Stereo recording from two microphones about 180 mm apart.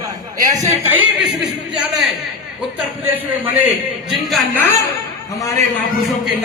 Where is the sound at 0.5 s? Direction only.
15° right (ahead or behind).